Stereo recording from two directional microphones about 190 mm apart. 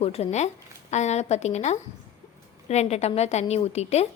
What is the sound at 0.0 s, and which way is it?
A woman's voice, 35° left (ahead or behind).